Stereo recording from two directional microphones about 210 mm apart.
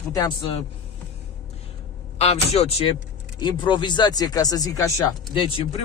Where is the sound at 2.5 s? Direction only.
30° left (ahead or behind).